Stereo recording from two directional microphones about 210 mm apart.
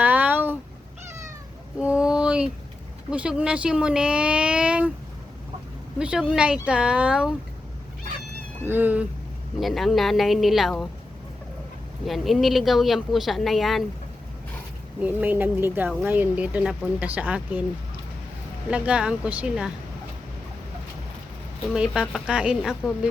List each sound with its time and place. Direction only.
0.0 s a sound: 10° right (ahead or behind)
1.8 s a sound: 5° right (ahead or behind)
3.1 s speech: 5° right (ahead or behind)
6.0 s speech: 5° right (ahead or behind)
8.6 s speech: 10° right (ahead or behind)
12.0 s speech: centre (ahead or behind)
15.0 s speech: 10° right (ahead or behind)
18.7 s speech: 5° right (ahead or behind)
21.7 s speech: centre (ahead or behind)